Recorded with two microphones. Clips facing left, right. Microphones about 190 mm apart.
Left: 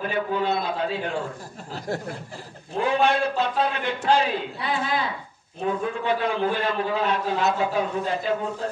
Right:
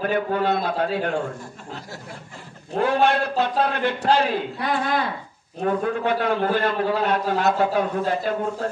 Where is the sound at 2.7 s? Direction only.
55° right (ahead or behind).